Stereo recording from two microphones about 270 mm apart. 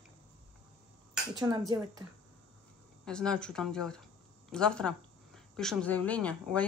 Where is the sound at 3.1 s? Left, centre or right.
Centre.